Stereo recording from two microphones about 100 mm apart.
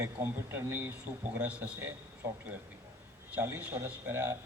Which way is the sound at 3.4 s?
20° right (ahead or behind).